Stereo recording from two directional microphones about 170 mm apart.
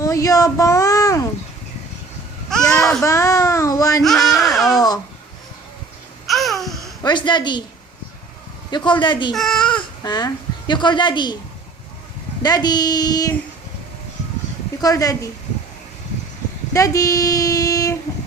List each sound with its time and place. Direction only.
0.0 s a child's voice: 20° left (ahead or behind)
2.5 s babbling: 5° left (ahead or behind)
3.0 s a child's voice: 20° left (ahead or behind)
4.0 s baby cry: centre (ahead or behind)
6.2 s babbling: centre (ahead or behind)
7.0 s a woman's voice: 25° left (ahead or behind)
8.7 s child singing: 30° left (ahead or behind)
9.3 s speech: centre (ahead or behind)
10.0 s a woman's voice: 25° left (ahead or behind)
12.4 s child singing: 25° left (ahead or behind)
14.8 s child singing: 20° left (ahead or behind)
16.7 s child singing: 20° left (ahead or behind)